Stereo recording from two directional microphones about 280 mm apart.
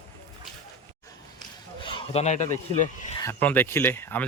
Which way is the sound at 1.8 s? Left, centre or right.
Centre.